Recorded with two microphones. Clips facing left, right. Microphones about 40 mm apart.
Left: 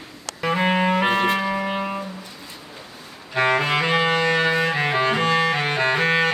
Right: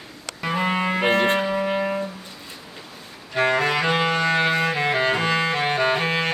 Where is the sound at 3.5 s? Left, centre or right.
Left.